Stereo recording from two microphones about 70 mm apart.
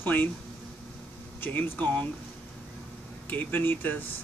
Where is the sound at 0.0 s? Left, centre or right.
Left.